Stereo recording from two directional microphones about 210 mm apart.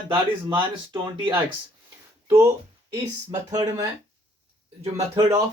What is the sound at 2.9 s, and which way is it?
Speech, 15° right (ahead or behind).